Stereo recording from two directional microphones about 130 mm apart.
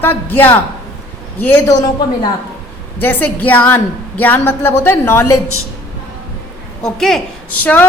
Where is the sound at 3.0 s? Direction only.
10° left (ahead or behind).